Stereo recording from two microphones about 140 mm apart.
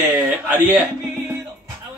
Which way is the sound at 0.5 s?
15° right (ahead or behind).